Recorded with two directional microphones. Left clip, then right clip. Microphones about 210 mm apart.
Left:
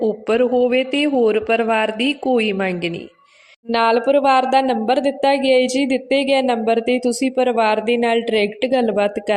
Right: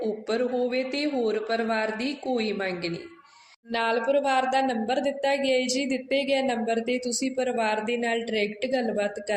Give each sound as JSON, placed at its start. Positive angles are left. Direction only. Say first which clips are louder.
{"t": 0.0, "sound": "a woman's voice", "louder": "left 10 dB", "side_deg": 45}